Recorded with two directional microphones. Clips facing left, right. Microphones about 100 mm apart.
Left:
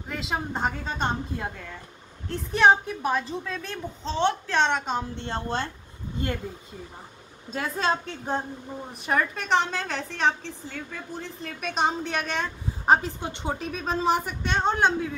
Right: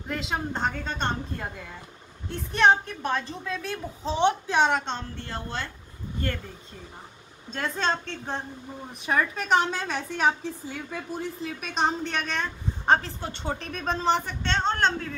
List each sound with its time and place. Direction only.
0.1 s a woman's voice: centre (ahead or behind)
4.7 s a man's voice: 5° left (ahead or behind)
5.1 s a woman's voice: 25° left (ahead or behind)
7.5 s a man's voice: 5° left (ahead or behind)
13.6 s a man's voice: 5° left (ahead or behind)